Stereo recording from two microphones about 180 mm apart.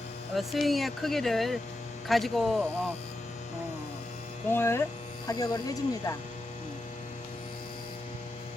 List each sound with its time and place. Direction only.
0.3 s speech: centre (ahead or behind)
4.4 s speech: 15° left (ahead or behind)